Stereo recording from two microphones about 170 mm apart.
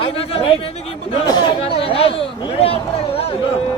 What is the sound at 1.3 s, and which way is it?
Speech, 25° left (ahead or behind).